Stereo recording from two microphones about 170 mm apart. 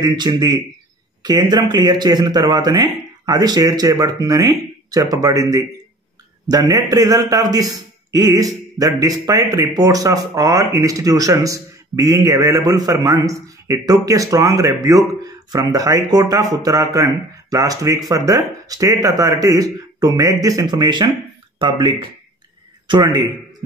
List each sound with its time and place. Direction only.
0.0 s speech: 25° right (ahead or behind)